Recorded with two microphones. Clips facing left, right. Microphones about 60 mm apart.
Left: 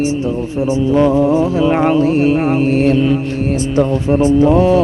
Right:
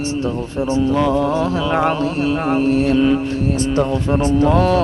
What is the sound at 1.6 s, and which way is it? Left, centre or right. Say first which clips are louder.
Music: left 5 dB; left.